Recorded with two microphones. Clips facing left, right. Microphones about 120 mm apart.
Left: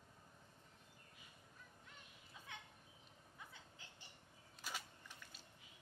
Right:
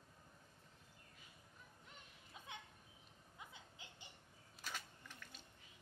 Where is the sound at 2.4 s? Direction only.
20° right (ahead or behind).